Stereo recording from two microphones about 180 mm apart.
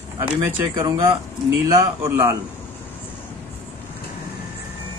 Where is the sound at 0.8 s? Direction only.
20° right (ahead or behind).